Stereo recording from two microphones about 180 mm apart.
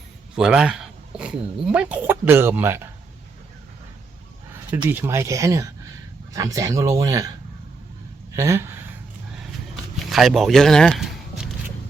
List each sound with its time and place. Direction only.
0.3 s speech: 5° right (ahead or behind)
4.9 s speech: 10° right (ahead or behind)
8.4 s speech: 15° right (ahead or behind)
10.1 s speech: centre (ahead or behind)